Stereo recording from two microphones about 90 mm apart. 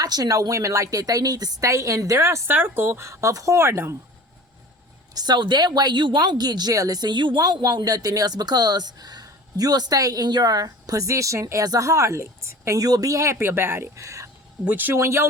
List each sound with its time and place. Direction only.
0.0 s a woman's voice: 45° right (ahead or behind); by 3.9 s 30° right (ahead or behind)
5.1 s a woman's voice: 50° right (ahead or behind); by 14.3 s 35° right (ahead or behind)
14.6 s speech: 20° right (ahead or behind)
14.9 s a woman's voice: 30° right (ahead or behind)